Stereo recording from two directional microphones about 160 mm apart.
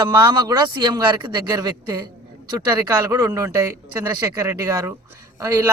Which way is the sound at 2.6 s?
10° right (ahead or behind).